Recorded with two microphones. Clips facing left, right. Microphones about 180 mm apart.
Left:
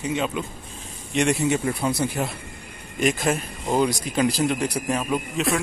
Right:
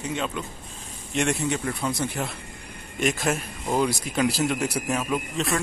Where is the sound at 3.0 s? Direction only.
Centre (ahead or behind).